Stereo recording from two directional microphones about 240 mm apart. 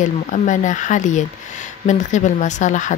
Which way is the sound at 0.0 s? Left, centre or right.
Left.